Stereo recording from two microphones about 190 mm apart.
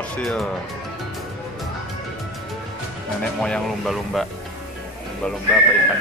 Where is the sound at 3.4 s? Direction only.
Centre (ahead or behind).